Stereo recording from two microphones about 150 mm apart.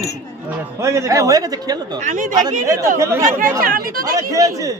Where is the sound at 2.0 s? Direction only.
55° right (ahead or behind).